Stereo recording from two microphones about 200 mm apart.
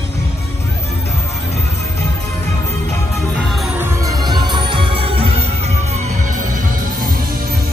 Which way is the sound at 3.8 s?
15° right (ahead or behind).